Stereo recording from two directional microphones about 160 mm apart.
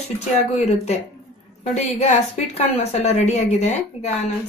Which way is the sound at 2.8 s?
40° left (ahead or behind).